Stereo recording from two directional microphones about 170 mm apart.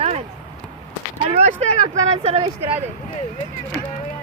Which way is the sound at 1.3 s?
40° right (ahead or behind).